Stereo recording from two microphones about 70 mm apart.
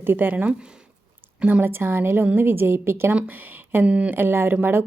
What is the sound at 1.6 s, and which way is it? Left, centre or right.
Speech, right.